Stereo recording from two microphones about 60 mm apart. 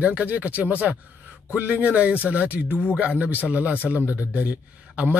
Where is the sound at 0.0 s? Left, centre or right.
Right.